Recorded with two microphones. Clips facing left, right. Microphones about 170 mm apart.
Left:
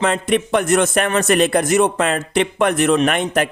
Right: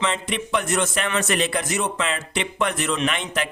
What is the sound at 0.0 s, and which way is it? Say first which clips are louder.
A man's voice: left 8 dB; 50° left (ahead or behind).